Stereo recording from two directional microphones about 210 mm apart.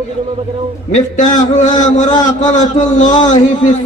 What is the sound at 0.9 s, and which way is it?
A man's voice, 35° left (ahead or behind).